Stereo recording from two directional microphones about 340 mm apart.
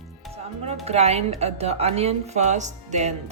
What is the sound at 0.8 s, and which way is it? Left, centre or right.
Speech, centre.